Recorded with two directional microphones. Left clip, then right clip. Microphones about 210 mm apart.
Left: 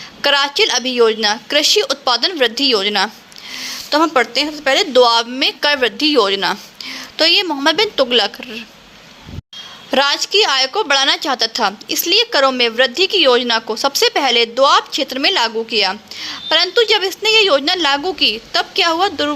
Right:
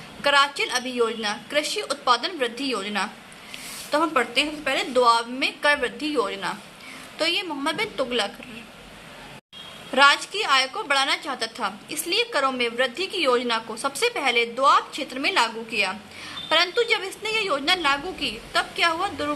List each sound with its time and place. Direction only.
0.2 s a woman's voice: 40° left (ahead or behind)
9.9 s a woman's voice: 40° left (ahead or behind)